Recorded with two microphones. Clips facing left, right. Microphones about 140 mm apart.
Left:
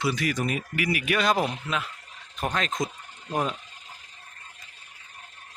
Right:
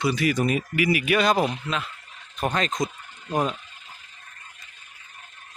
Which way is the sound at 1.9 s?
40° left (ahead or behind).